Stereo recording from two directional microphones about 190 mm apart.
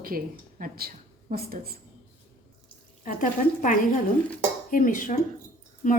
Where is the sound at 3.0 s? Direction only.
45° left (ahead or behind).